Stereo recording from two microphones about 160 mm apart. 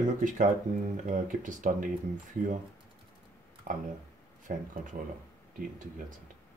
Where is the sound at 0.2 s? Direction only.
55° right (ahead or behind).